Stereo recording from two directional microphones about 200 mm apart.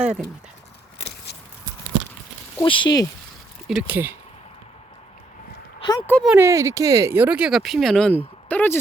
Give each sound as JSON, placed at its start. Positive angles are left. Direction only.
{"t": 0.0, "sound": "speech", "side_deg": -5}
{"t": 2.6, "sound": "speech", "side_deg": 25}
{"t": 3.7, "sound": "speech", "side_deg": -5}
{"t": 5.8, "sound": "speech", "side_deg": 25}
{"t": 6.1, "sound": "speech", "side_deg": 5}
{"t": 6.3, "sound": "speech", "side_deg": -15}